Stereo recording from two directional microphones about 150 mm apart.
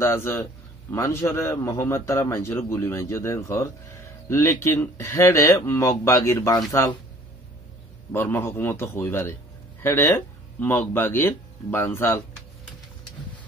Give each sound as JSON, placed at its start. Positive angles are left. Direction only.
{"t": 0.0, "sound": "a man's voice", "side_deg": 15}
{"t": 8.1, "sound": "a man's voice", "side_deg": 15}